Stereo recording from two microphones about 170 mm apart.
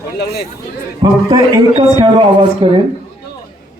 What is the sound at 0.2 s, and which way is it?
Speech, 70° left (ahead or behind).